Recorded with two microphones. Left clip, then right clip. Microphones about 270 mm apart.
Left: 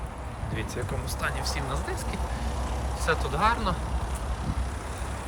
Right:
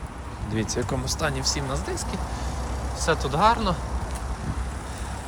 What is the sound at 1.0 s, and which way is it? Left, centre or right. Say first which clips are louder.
Speech: right 2 dB; centre.